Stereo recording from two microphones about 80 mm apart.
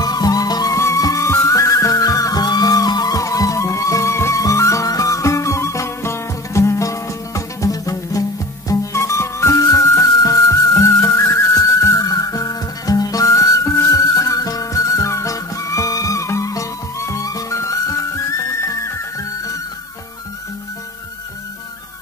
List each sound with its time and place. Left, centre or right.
0.0 s music: left
0.7 s music: left